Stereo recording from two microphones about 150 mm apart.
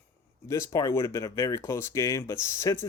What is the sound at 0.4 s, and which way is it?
Speech, 20° left (ahead or behind).